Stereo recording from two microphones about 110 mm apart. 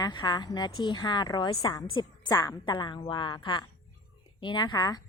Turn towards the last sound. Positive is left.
turn(degrees=40)  # may be behind; listen again after turning